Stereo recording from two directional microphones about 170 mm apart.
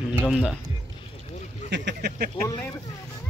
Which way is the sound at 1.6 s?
85° right.